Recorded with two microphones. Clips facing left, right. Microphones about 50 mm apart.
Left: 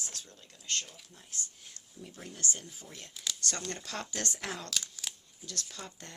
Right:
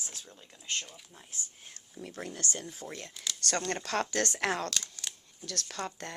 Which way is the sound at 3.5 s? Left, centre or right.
Right.